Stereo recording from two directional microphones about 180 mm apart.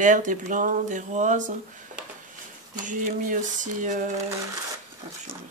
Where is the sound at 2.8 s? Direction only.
45° right (ahead or behind).